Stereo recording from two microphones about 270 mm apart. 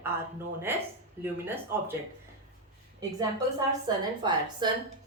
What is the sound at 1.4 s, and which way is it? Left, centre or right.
Speech, centre.